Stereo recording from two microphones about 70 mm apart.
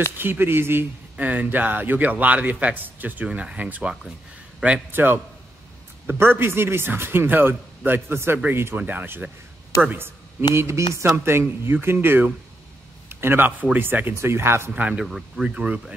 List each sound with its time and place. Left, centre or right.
0.2 s a man's voice: right
1.1 s a man's voice: right
4.6 s a man's voice: centre
4.9 s a man's voice: right
10.5 s a man's voice: right
14.7 s speech: centre